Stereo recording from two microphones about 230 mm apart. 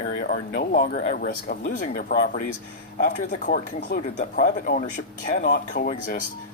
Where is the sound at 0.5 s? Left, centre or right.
Left.